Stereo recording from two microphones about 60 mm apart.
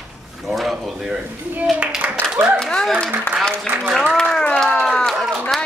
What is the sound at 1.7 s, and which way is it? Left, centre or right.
Clapping, centre.